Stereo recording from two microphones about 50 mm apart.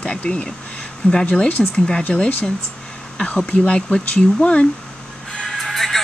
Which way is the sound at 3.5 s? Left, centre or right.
Left.